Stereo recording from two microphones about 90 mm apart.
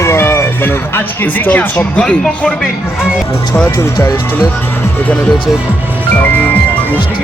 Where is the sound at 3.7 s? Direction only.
25° left (ahead or behind).